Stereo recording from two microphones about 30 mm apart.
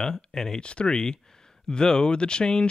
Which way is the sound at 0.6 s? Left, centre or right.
Left.